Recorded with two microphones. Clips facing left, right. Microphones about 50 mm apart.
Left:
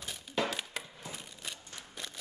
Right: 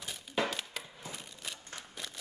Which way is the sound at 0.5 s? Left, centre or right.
Centre.